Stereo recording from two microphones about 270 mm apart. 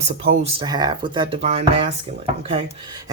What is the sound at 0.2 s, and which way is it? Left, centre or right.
Speech, right.